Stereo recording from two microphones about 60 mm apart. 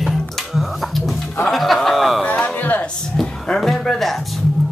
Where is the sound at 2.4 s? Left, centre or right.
Left.